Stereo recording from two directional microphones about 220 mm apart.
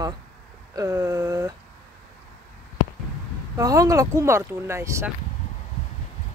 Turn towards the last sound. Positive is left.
turn(degrees=-10)  # may be behind; listen again after turning